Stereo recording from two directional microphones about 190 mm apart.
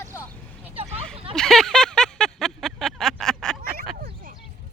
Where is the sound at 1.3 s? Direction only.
Centre (ahead or behind).